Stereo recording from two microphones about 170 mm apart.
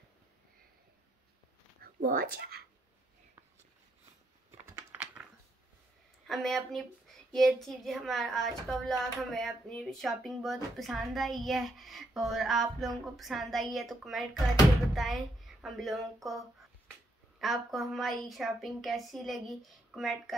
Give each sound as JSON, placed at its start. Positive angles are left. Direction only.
{"t": 1.8, "sound": "speech", "side_deg": -60}
{"t": 4.5, "sound": "typing", "side_deg": -15}
{"t": 6.2, "sound": "a woman's voice", "side_deg": 0}